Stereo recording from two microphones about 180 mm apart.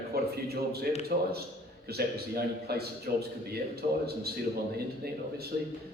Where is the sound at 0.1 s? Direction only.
60° right (ahead or behind).